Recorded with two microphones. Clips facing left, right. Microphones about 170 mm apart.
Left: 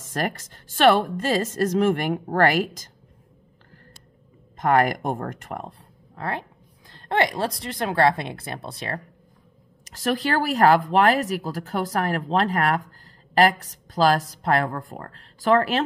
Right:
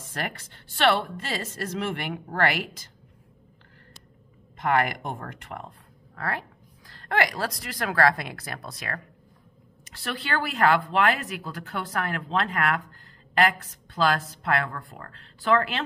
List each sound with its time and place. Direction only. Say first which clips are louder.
0.1 s a woman's voice: left 7 dB; 40° left (ahead or behind)
4.6 s speech: left 5 dB; 40° left (ahead or behind)
6.1 s speech: left 2 dB; 20° left (ahead or behind)
9.8 s speech: left 8 dB; 40° left (ahead or behind)